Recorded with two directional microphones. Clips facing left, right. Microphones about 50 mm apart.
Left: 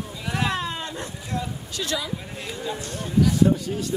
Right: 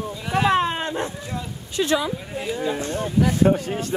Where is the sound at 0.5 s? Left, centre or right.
Right.